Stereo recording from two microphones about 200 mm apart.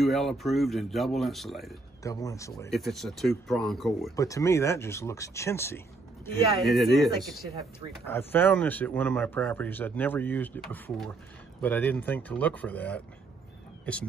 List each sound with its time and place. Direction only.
0.0 s speech: centre (ahead or behind)
2.0 s speech: 15° left (ahead or behind)
2.7 s speech: centre (ahead or behind)
4.2 s speech: 15° left (ahead or behind)
6.6 s speech: centre (ahead or behind)
8.0 s speech: 10° left (ahead or behind)